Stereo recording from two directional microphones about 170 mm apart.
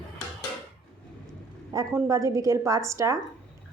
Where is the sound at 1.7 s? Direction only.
20° right (ahead or behind).